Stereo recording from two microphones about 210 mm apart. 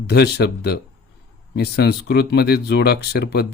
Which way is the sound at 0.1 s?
50° left (ahead or behind).